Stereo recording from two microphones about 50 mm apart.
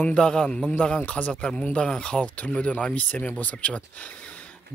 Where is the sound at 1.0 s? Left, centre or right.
Left.